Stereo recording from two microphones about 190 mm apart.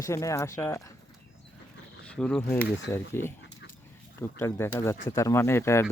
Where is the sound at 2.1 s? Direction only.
5° left (ahead or behind).